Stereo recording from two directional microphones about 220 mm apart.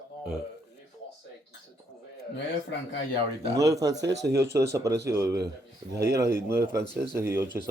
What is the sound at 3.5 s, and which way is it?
Speech, 15° right (ahead or behind).